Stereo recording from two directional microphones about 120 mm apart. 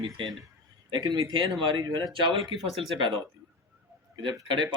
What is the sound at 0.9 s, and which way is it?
Speech, 30° right (ahead or behind).